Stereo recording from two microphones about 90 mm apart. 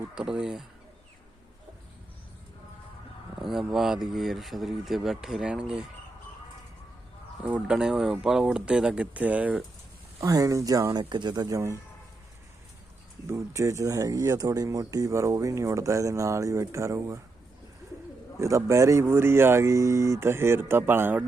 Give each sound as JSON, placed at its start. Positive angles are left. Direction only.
{"t": 0.1, "sound": "speech", "side_deg": -5}
{"t": 3.4, "sound": "speech", "side_deg": -5}
{"t": 7.4, "sound": "speech", "side_deg": -10}
{"t": 10.2, "sound": "speech", "side_deg": -40}
{"t": 11.1, "sound": "speech", "side_deg": -55}
{"t": 13.2, "sound": "speech", "side_deg": -35}
{"t": 18.3, "sound": "speech", "side_deg": -35}